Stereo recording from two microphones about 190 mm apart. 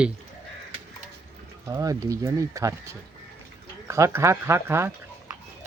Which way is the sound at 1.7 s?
15° right (ahead or behind).